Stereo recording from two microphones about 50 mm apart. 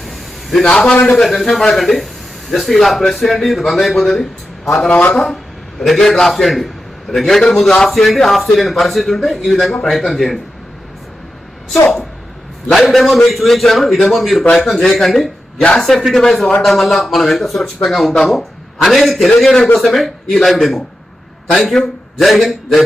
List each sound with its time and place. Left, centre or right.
0.0 s a sound: centre
0.7 s a man's voice: centre
1.3 s a man's voice: centre
4.9 s speech: left
5.1 s a man's voice: centre
12.7 s a man's voice: centre